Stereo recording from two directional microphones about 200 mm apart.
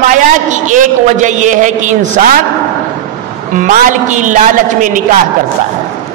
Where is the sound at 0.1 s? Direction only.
40° right (ahead or behind).